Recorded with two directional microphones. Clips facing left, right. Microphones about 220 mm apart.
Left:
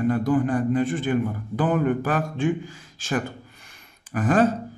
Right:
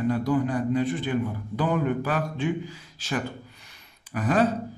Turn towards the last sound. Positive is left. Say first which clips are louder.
# left 3 dB
turn(degrees=50)  # may be behind; listen again after turning